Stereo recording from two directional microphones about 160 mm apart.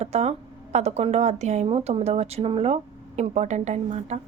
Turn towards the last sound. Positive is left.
turn(degrees=-45)  # may be behind; listen again after turning